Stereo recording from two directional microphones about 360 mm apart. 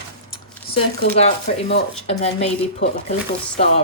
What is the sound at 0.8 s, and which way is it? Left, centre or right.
Speech, centre.